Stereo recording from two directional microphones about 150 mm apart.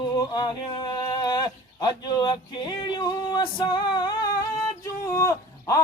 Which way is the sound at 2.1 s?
30° left (ahead or behind).